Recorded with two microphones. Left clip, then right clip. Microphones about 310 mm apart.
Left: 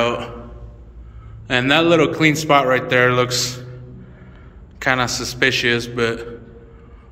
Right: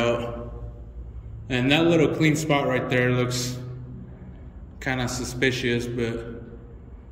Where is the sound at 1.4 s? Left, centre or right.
Centre.